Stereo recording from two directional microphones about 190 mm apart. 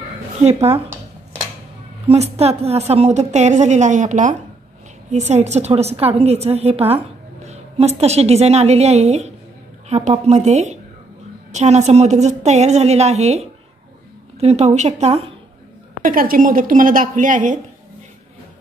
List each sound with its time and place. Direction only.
0.4 s a woman's voice: 35° right (ahead or behind)
2.0 s a woman's voice: 35° right (ahead or behind)
16.0 s a woman's voice: 45° right (ahead or behind)